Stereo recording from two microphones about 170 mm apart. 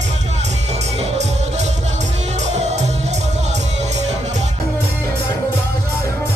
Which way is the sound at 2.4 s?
40° right (ahead or behind).